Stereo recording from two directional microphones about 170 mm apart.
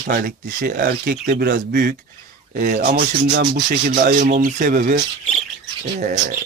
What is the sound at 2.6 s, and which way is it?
Speech, 50° right (ahead or behind).